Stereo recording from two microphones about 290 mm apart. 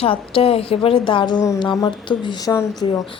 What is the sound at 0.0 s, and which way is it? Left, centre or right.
A woman's voice, centre.